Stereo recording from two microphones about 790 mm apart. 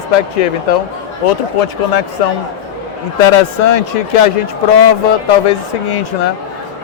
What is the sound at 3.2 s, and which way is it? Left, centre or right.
Speech, left.